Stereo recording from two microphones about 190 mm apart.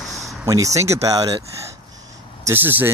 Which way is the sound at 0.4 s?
15° right (ahead or behind).